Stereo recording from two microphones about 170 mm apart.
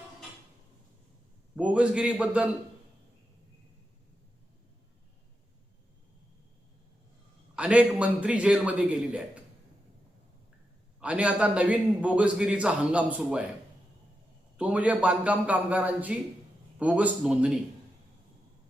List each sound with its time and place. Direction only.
1.5 s a man's voice: 10° right (ahead or behind)
7.5 s a man's voice: 5° right (ahead or behind)
11.0 s a man's voice: 5° right (ahead or behind)
14.6 s a man's voice: 10° right (ahead or behind)